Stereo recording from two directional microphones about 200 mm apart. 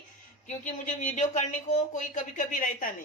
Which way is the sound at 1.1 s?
35° left (ahead or behind).